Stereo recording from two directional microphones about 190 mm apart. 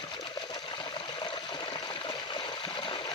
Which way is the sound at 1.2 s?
25° left (ahead or behind).